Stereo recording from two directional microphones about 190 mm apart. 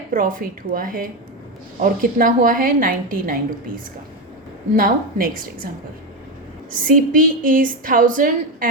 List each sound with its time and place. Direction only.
0.1 s a woman's voice: 45° right (ahead or behind)
4.8 s a woman's voice: 50° right (ahead or behind)
6.7 s a woman's voice: 45° right (ahead or behind)